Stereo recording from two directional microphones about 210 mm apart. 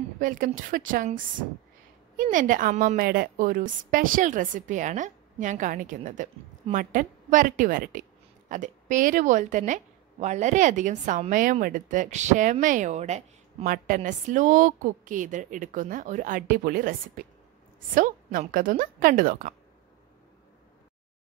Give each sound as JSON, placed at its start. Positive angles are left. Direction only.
{"t": 0.2, "sound": "a woman's voice", "side_deg": -40}
{"t": 17.9, "sound": "a woman's voice", "side_deg": -40}